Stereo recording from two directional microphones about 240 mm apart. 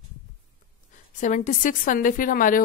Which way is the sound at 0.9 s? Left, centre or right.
Left.